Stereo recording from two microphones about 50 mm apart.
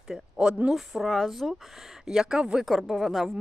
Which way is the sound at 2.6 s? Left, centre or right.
Centre.